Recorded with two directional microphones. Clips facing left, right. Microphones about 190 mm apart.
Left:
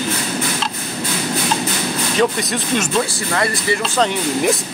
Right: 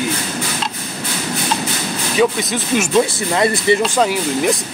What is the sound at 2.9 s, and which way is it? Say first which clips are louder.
Speech: right 4 dB; 20° right (ahead or behind).